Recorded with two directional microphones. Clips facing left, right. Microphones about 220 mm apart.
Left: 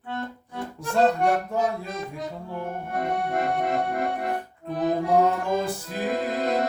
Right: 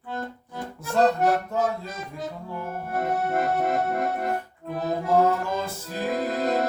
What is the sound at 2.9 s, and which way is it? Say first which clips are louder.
Accordion: right 1 dB; 5° right (ahead or behind).